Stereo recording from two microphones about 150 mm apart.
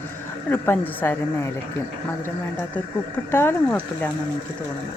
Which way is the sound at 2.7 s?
15° left (ahead or behind).